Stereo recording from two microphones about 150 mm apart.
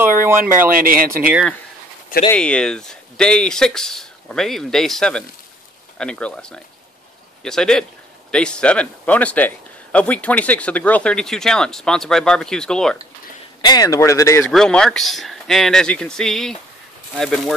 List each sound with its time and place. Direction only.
0.4 s speech: 65° right (ahead or behind)
1.2 s speech: 10° right (ahead or behind)
2.3 s a man's voice: 5° left (ahead or behind)
13.6 s speech: 25° left (ahead or behind)
14.4 s speech: 5° left (ahead or behind)